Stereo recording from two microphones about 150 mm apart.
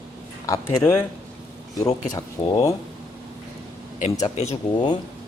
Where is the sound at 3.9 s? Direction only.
50° left (ahead or behind).